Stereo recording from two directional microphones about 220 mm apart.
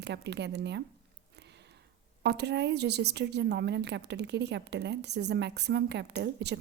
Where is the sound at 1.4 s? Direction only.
50° right (ahead or behind).